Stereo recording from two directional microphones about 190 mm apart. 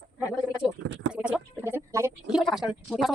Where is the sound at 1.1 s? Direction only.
5° right (ahead or behind).